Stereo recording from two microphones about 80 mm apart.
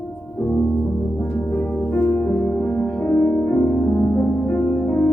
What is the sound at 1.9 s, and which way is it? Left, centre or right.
Music, left.